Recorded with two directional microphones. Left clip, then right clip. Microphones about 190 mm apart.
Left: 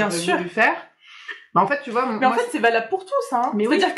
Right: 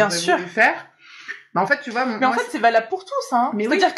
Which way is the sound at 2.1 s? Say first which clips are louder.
Even; 40° right (ahead or behind).